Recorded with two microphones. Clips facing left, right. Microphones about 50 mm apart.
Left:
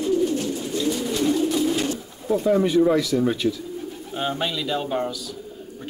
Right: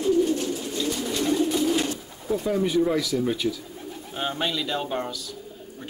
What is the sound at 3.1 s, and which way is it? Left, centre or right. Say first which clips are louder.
Speech: left 4 dB; left.